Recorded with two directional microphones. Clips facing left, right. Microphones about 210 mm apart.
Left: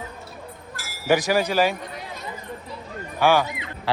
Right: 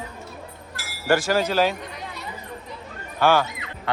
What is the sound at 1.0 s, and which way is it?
Speech, 15° left (ahead or behind).